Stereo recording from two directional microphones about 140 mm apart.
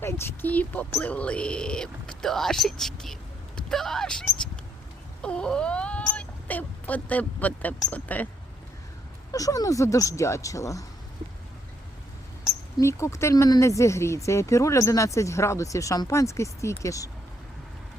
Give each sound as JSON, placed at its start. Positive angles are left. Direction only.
{"t": 0.0, "sound": "speech", "side_deg": 15}
{"t": 9.3, "sound": "speech", "side_deg": 25}
{"t": 12.8, "sound": "speech", "side_deg": 20}